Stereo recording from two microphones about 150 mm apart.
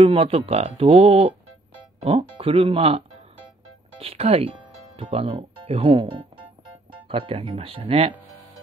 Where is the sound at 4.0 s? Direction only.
40° right (ahead or behind).